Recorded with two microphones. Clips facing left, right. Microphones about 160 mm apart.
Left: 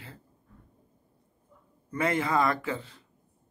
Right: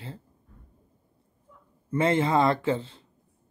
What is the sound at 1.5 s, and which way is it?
Dog, 90° right.